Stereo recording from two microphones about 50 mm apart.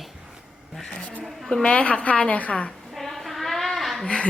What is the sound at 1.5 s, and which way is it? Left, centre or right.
A woman's voice, centre.